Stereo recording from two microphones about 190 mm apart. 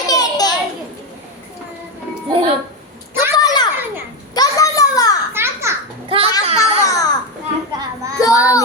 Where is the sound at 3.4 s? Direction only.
20° left (ahead or behind).